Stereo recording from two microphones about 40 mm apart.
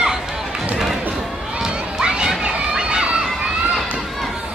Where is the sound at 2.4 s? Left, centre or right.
Right.